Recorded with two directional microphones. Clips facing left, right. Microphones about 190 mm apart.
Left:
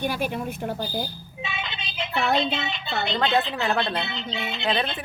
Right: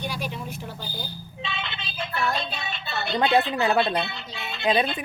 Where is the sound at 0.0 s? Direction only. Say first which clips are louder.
Left 5 dB; 55° left (ahead or behind).